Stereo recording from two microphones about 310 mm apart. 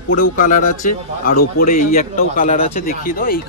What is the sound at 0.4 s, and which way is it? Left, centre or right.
A man's voice, left.